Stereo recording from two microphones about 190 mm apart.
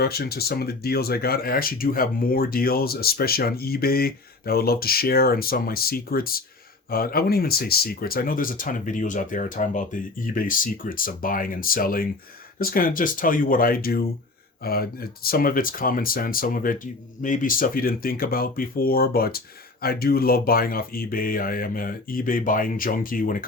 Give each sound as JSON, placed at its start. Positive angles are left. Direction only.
{"t": 0.0, "sound": "speech", "side_deg": 55}